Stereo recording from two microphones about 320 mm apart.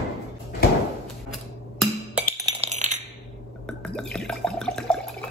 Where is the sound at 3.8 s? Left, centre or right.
Centre.